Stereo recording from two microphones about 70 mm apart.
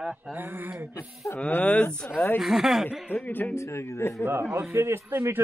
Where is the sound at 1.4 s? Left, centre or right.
Left.